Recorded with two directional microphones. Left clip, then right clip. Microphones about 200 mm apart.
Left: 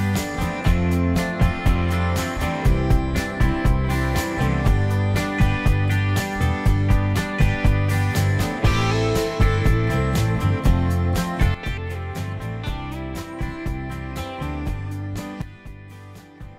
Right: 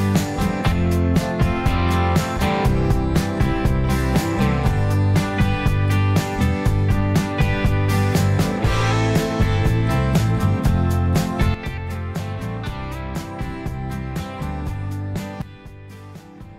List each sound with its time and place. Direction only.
0.0 s music: 30° right (ahead or behind)